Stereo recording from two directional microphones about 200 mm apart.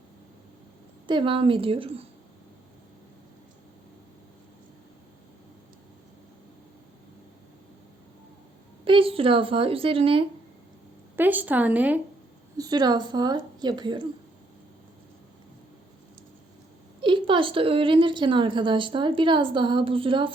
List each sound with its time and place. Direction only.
1.0 s a woman's voice: 25° right (ahead or behind)
8.8 s a woman's voice: 25° right (ahead or behind)
11.2 s a woman's voice: 10° right (ahead or behind)
12.5 s a woman's voice: 20° right (ahead or behind)
17.0 s a woman's voice: 25° right (ahead or behind)